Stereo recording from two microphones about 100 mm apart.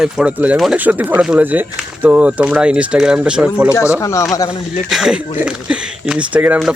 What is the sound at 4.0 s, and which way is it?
Speech, 30° left (ahead or behind).